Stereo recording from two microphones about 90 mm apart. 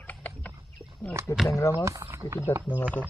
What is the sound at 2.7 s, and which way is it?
Speech, 15° left (ahead or behind).